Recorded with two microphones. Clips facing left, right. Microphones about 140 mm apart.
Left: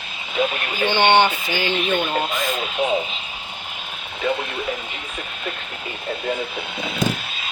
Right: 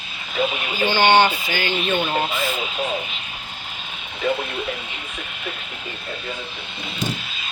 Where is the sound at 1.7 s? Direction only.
10° right (ahead or behind).